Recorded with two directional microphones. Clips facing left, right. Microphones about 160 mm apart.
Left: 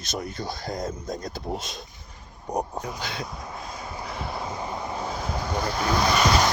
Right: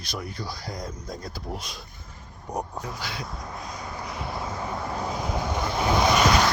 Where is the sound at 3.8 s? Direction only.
25° left (ahead or behind).